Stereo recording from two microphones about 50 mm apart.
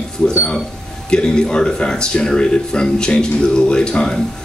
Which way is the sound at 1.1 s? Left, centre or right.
Centre.